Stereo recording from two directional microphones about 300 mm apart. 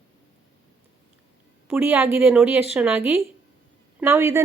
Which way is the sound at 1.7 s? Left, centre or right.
Centre.